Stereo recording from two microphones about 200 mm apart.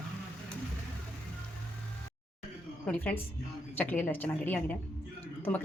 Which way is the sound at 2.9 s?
10° left (ahead or behind).